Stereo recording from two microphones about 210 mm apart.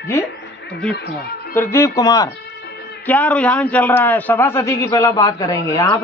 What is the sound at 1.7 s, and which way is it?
A man's voice, 15° left (ahead or behind).